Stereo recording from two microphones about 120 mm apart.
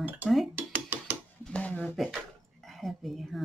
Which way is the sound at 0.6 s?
15° right (ahead or behind).